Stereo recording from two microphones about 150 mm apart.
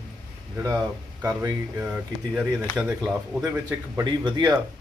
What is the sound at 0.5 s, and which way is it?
Speech, 20° right (ahead or behind).